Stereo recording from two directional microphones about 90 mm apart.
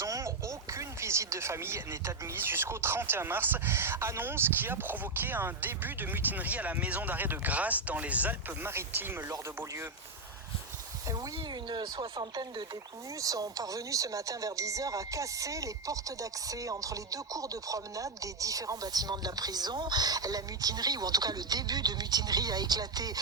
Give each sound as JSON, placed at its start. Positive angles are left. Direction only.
{"t": 0.0, "sound": "speech", "side_deg": -35}
{"t": 11.7, "sound": "speech", "side_deg": -55}
{"t": 13.1, "sound": "speech", "side_deg": -40}